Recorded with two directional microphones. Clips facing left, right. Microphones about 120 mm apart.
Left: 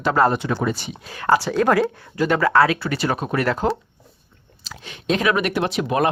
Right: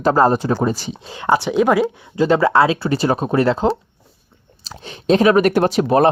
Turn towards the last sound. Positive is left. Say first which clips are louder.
# right 6 dB
turn(degrees=-35)  # may be behind; listen again after turning